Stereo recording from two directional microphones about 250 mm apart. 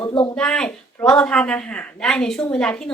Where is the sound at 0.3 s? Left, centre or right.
Centre.